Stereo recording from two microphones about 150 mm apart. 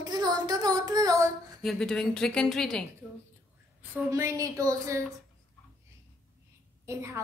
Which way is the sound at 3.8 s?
15° right (ahead or behind).